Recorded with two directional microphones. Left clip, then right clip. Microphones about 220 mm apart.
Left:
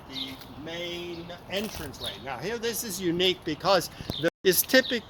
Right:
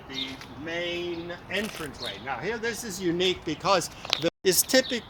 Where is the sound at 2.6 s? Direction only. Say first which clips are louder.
Even; 45° left (ahead or behind); by 5.1 s 25° left (ahead or behind).